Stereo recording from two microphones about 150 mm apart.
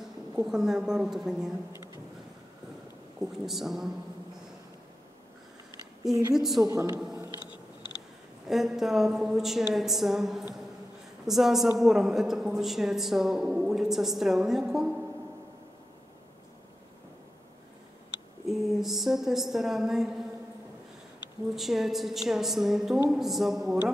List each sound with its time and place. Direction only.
0.5 s a woman's voice: 5° right (ahead or behind)
3.2 s a woman's voice: centre (ahead or behind)
6.3 s a woman's voice: centre (ahead or behind)
6.6 s a man's voice: 25° right (ahead or behind)
8.5 s a woman's voice: centre (ahead or behind)
18.5 s a woman's voice: centre (ahead or behind)
21.5 s a woman's voice: centre (ahead or behind)